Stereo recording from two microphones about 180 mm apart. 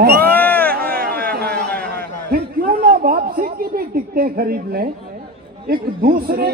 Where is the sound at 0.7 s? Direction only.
55° right (ahead or behind).